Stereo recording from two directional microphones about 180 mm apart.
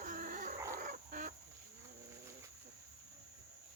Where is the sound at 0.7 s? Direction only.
50° right (ahead or behind).